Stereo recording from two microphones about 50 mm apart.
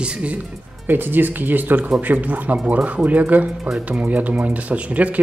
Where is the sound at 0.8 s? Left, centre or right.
Right.